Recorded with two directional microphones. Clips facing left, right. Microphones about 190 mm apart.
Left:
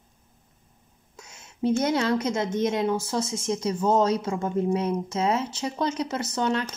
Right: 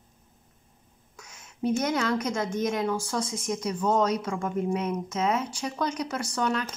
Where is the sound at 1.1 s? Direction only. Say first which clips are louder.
Left 2 dB; 25° left (ahead or behind).